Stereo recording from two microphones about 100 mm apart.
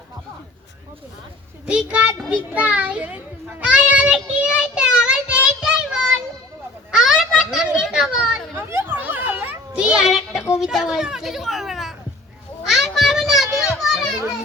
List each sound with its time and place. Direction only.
1.6 s a child's voice: 10° right (ahead or behind)
2.3 s a sound: 15° right (ahead or behind)
6.9 s children playing: 5° right (ahead or behind)
8.5 s children playing: 20° right (ahead or behind); by 10.4 s 5° right (ahead or behind)
10.6 s a child's voice: 5° right (ahead or behind)
12.6 s a sound: centre (ahead or behind)
13.7 s children playing: centre (ahead or behind)